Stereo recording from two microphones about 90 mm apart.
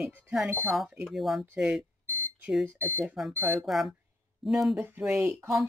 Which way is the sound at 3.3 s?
20° right (ahead or behind).